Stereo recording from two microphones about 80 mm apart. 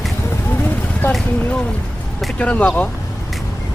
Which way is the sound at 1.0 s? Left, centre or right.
Left.